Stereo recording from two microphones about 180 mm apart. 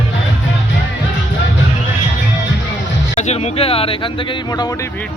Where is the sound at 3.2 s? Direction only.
35° left (ahead or behind).